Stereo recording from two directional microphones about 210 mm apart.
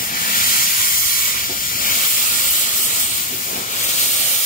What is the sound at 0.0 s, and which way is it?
Hiss, 40° left (ahead or behind).